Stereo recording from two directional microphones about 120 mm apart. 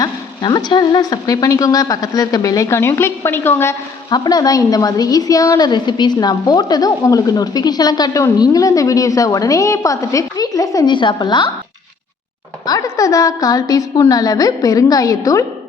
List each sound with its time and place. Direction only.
0.0 s speech: 35° left (ahead or behind); by 3.8 s 20° left (ahead or behind)
4.1 s a woman's voice: 35° left (ahead or behind)
12.6 s speech: 30° left (ahead or behind)